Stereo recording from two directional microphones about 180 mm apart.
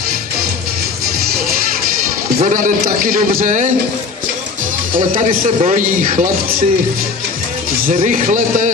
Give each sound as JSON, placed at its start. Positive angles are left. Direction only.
{"t": 2.4, "sound": "a man's voice", "side_deg": -45}
{"t": 4.9, "sound": "a man's voice", "side_deg": -50}
{"t": 7.8, "sound": "a man's voice", "side_deg": -45}